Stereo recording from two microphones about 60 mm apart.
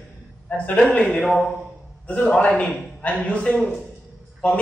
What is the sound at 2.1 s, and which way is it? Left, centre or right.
A man's voice, centre.